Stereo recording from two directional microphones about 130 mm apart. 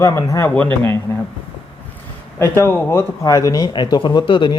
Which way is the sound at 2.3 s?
20° left (ahead or behind).